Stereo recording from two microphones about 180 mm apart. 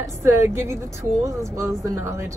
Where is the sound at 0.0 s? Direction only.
15° right (ahead or behind).